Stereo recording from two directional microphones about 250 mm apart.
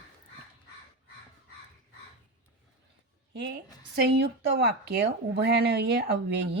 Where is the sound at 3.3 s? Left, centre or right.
Right.